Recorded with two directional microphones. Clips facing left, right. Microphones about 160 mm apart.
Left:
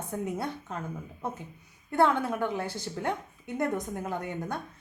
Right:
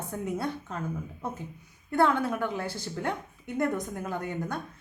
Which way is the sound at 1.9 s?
20° left (ahead or behind).